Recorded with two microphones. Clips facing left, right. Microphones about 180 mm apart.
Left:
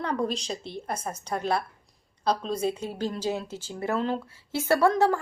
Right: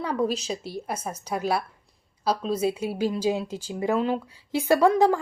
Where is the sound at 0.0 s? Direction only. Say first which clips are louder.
Right 2 dB; 5° right (ahead or behind).